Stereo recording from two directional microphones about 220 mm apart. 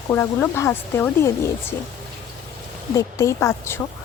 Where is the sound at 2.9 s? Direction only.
15° left (ahead or behind).